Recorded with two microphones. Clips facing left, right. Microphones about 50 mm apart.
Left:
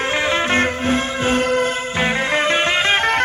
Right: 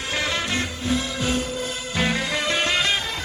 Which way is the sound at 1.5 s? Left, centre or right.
Left.